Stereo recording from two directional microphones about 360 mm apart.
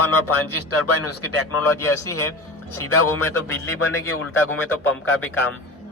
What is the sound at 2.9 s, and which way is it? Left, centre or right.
A man's voice, left.